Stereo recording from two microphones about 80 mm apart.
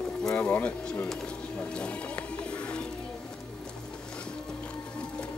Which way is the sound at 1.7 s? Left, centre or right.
Centre.